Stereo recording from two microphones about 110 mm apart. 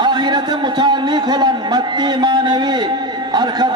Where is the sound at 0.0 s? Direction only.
40° right (ahead or behind).